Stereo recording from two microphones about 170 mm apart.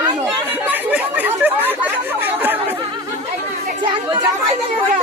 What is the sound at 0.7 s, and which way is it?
Speech, 10° right (ahead or behind).